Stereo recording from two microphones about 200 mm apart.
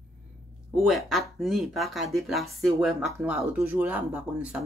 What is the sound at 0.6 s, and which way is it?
Speech, centre (ahead or behind).